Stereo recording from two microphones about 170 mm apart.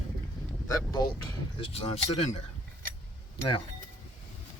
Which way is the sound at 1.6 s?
35° left (ahead or behind).